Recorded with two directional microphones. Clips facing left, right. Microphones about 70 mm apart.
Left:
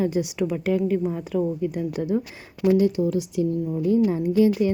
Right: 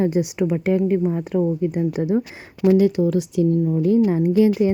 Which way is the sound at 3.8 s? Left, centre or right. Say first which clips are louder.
Right 1 dB; right.